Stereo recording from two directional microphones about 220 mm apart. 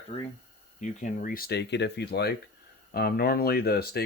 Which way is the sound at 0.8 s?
35° left (ahead or behind).